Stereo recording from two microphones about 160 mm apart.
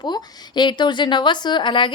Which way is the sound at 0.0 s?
25° left (ahead or behind).